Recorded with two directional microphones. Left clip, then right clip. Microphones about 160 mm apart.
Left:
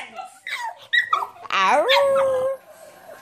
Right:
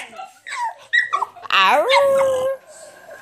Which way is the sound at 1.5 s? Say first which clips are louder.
Right 3 dB; 10° left (ahead or behind).